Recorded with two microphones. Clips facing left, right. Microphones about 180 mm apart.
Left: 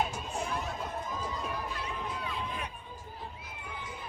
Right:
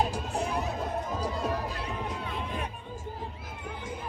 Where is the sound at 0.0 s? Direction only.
35° right (ahead or behind).